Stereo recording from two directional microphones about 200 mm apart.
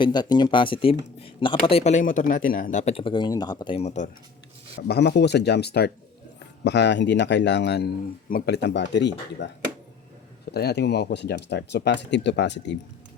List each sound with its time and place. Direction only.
0.0 s speech: 20° left (ahead or behind)
4.9 s speech: 55° left (ahead or behind)
10.5 s speech: 55° left (ahead or behind)